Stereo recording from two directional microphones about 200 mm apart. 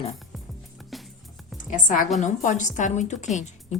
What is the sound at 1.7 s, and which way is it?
Speech, 40° left (ahead or behind).